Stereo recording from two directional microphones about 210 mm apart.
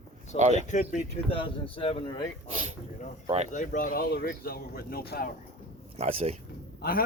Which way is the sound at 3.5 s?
40° left (ahead or behind).